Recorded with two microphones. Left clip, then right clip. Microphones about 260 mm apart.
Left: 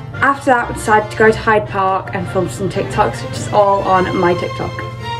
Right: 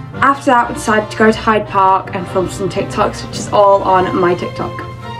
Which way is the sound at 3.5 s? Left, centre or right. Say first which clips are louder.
Right 2 dB; centre.